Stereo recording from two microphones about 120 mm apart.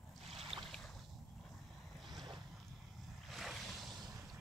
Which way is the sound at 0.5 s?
Centre (ahead or behind).